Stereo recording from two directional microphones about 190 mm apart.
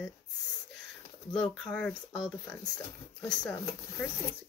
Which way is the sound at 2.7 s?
20° left (ahead or behind).